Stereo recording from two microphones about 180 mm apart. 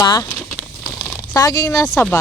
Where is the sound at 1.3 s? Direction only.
20° left (ahead or behind).